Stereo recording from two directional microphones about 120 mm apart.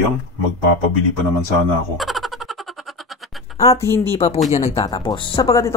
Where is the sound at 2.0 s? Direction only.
Centre (ahead or behind).